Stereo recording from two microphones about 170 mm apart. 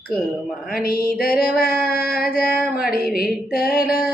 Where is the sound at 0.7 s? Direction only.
60° left (ahead or behind).